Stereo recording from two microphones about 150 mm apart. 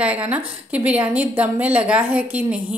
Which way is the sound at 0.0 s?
10° right (ahead or behind).